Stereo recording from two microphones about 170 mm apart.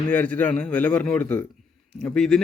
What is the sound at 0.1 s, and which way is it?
Speech, 10° left (ahead or behind).